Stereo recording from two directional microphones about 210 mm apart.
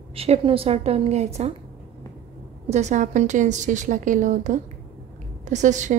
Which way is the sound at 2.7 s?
35° right (ahead or behind).